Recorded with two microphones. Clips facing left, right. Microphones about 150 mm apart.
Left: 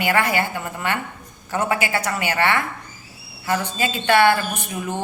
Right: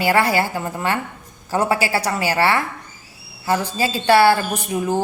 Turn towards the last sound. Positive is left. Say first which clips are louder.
# right 6 dB
turn(degrees=-30)  # may be behind; listen again after turning